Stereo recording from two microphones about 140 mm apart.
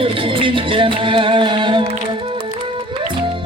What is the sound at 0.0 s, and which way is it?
Music, 40° right (ahead or behind).